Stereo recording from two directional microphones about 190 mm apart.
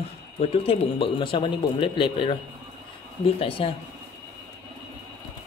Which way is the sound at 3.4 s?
30° left (ahead or behind).